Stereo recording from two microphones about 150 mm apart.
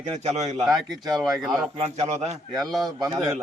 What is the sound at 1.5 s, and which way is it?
Speech, 45° right (ahead or behind).